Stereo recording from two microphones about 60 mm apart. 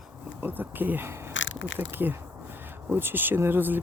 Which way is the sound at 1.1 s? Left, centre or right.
Right.